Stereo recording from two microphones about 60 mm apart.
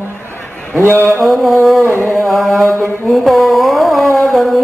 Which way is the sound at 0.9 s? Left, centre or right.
Left.